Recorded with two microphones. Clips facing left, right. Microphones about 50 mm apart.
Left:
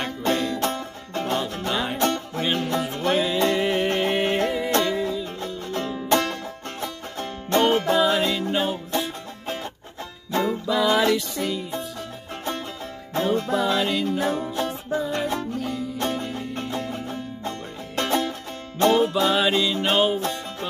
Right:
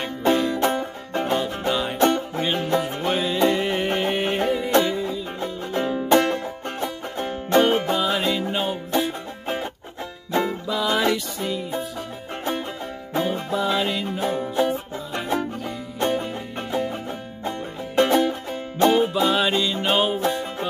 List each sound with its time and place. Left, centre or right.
0.0 s music: centre
2.0 s music: centre
4.9 s music: centre
5.4 s music: centre
10.7 s music: centre
13.1 s music: centre